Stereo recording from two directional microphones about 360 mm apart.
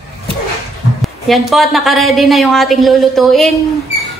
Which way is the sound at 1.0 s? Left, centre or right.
Centre.